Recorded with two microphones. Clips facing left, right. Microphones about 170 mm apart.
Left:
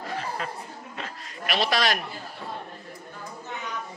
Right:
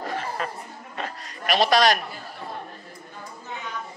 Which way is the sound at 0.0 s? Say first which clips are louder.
Right 2 dB; 50° right (ahead or behind).